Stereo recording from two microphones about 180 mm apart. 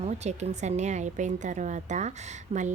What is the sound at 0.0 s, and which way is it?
A woman's voice, 40° right (ahead or behind).